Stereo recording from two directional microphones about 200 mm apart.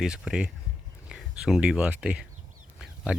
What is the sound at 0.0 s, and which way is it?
Speech, 5° right (ahead or behind).